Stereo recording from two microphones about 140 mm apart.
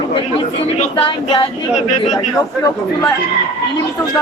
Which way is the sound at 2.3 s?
25° left (ahead or behind).